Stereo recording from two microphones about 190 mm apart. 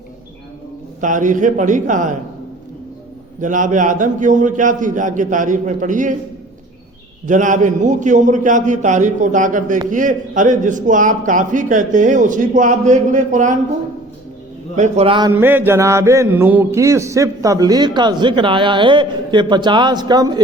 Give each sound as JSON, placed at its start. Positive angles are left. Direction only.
{"t": 1.0, "sound": "a man's voice", "side_deg": -40}
{"t": 3.4, "sound": "a man's voice", "side_deg": -40}
{"t": 7.3, "sound": "a man's voice", "side_deg": -40}
{"t": 14.8, "sound": "a man's voice", "side_deg": -35}
{"t": 15.3, "sound": "mantra", "side_deg": -10}